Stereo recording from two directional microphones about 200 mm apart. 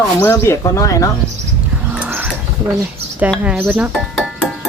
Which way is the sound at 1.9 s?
10° right (ahead or behind).